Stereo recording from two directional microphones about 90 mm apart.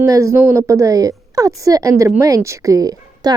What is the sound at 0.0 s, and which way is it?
A woman's voice, 35° right (ahead or behind).